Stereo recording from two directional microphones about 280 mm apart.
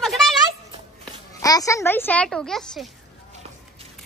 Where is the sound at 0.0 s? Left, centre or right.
Centre.